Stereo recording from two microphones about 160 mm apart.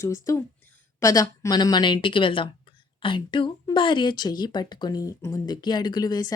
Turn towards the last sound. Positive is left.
turn(degrees=25)  # may be behind; listen again after turning